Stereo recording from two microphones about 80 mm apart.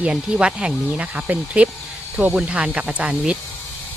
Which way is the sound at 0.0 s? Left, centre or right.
Centre.